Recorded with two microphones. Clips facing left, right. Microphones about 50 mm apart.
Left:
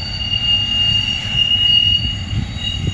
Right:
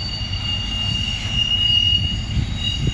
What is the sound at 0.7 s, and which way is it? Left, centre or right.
Train, left.